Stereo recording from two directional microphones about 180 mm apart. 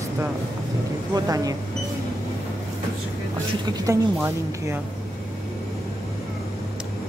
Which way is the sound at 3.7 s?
15° right (ahead or behind).